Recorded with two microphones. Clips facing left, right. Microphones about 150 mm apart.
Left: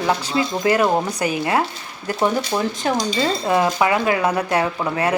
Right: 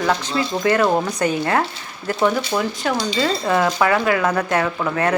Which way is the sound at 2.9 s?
45° left (ahead or behind).